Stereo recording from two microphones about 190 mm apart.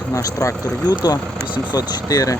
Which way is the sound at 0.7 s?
10° right (ahead or behind).